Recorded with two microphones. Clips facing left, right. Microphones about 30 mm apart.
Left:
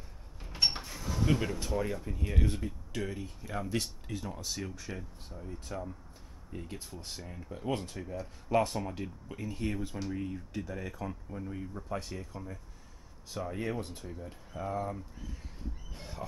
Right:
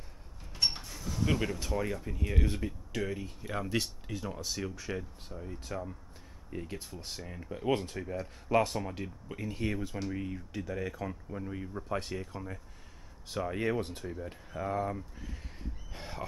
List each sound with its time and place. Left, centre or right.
0.5 s sliding door: centre
1.2 s speech: centre
7.2 s speech: centre
14.0 s speech: centre
15.9 s a sound: right